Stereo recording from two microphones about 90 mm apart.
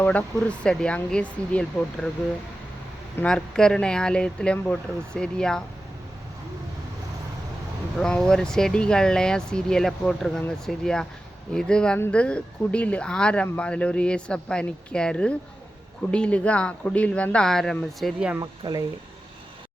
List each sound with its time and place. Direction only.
0.0 s speech: 15° left (ahead or behind)
3.2 s speech: 10° left (ahead or behind)
7.9 s speech: 5° left (ahead or behind)
18.6 s speech: 70° right (ahead or behind)